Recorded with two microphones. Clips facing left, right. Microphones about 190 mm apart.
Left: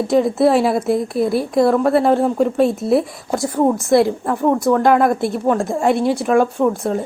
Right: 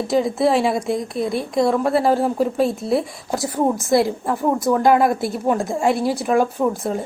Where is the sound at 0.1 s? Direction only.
Centre (ahead or behind).